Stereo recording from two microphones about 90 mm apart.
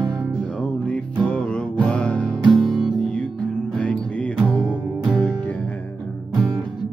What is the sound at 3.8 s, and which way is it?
Music, 15° left (ahead or behind).